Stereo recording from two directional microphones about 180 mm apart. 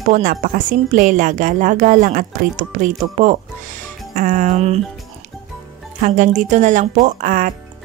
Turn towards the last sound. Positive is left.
turn(degrees=-50)  # may be behind; listen again after turning